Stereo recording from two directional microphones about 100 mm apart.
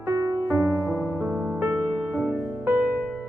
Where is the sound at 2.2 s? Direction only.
20° right (ahead or behind).